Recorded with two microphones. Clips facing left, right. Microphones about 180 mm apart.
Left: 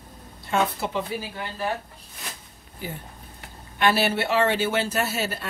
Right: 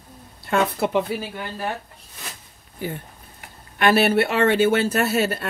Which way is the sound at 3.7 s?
55° right (ahead or behind).